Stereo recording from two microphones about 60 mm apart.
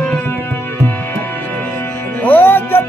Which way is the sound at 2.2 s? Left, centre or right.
Left.